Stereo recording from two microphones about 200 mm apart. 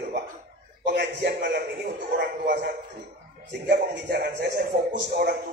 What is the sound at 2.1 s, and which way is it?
Speech, 55° right (ahead or behind).